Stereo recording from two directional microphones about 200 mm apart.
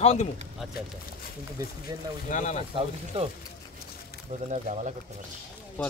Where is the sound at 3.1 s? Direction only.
30° right (ahead or behind).